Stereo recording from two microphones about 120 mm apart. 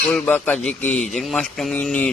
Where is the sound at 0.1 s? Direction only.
15° left (ahead or behind).